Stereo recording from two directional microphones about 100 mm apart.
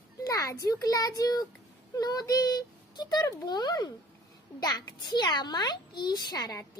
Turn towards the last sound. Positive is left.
turn(degrees=40)  # may be behind; listen again after turning